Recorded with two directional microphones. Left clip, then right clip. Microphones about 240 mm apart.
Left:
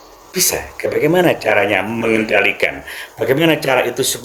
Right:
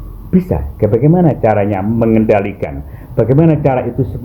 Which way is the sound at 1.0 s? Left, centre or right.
Left.